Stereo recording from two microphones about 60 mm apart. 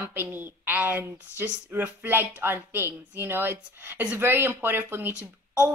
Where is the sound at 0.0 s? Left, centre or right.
Right.